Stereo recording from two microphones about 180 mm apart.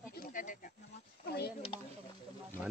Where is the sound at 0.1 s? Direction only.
50° left (ahead or behind).